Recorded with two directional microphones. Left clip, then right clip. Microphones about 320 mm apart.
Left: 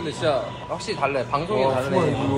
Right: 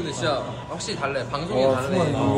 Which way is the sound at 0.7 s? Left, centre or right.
Centre.